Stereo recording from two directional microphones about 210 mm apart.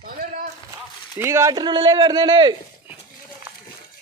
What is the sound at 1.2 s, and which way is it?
Speech, 15° right (ahead or behind).